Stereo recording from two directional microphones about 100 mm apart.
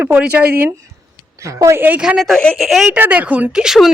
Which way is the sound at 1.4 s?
30° right (ahead or behind).